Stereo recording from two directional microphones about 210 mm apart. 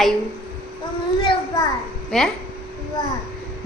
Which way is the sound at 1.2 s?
25° left (ahead or behind).